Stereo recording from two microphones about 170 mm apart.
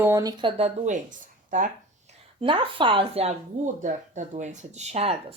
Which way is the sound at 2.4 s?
30° right (ahead or behind).